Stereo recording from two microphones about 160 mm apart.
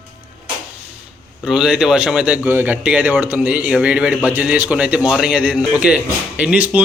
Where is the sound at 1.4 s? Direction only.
5° right (ahead or behind).